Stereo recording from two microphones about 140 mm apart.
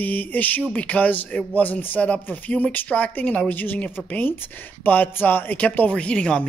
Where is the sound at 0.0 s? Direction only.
15° left (ahead or behind).